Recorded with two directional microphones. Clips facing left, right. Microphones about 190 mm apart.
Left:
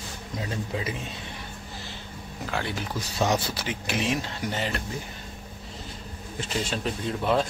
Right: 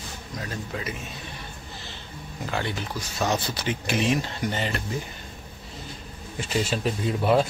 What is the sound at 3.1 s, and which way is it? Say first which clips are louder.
Speech: left 1 dB; 10° left (ahead or behind).